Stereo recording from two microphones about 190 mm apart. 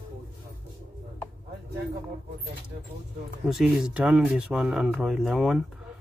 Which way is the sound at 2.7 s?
50° right (ahead or behind).